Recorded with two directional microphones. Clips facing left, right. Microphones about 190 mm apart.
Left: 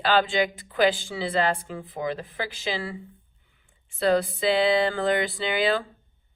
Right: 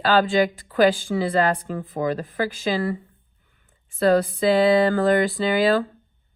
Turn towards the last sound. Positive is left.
turn(degrees=-45)  # may be behind; listen again after turning